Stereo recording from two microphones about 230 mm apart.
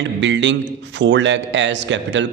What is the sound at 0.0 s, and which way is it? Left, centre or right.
A man's voice, right.